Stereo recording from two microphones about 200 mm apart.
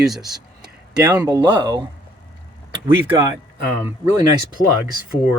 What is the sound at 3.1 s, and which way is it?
Speech, 15° right (ahead or behind).